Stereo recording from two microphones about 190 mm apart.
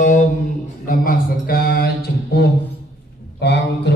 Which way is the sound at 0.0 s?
40° left (ahead or behind).